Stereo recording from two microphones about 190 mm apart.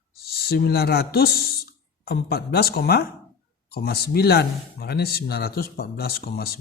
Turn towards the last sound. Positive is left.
turn(degrees=55)  # may be behind; listen again after turning